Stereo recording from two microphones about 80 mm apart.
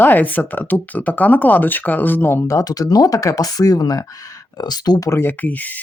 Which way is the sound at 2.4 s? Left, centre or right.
Left.